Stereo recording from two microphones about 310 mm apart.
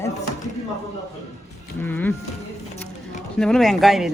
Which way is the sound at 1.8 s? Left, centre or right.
Centre.